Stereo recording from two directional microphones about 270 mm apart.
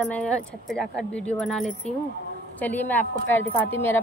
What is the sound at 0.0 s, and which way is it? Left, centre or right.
A woman's voice, centre.